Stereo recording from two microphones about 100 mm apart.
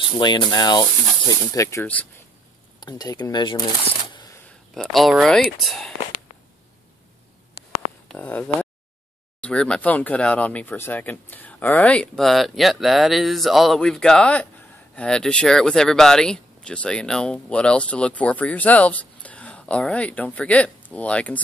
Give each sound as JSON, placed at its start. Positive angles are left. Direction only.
{"t": 0.2, "sound": "speech", "side_deg": 50}
{"t": 2.8, "sound": "speech", "side_deg": 45}
{"t": 4.7, "sound": "speech", "side_deg": 0}
{"t": 8.2, "sound": "speech", "side_deg": 15}